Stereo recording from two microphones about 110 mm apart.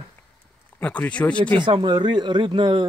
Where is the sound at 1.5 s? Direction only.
45° right (ahead or behind).